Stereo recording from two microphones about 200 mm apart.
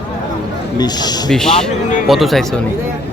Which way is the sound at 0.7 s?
20° left (ahead or behind).